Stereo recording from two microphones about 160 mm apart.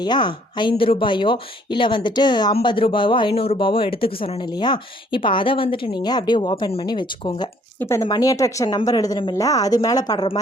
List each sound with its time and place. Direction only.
0.0 s speech: 30° left (ahead or behind)
7.8 s speech: 15° left (ahead or behind)